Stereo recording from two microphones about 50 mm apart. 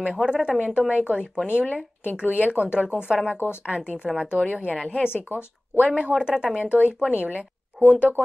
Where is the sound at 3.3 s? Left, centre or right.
Left.